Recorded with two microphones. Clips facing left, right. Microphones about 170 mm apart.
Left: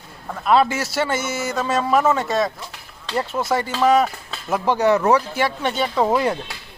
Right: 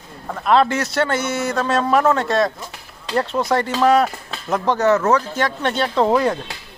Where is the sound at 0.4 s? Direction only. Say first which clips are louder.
Right 1 dB; 5° left (ahead or behind).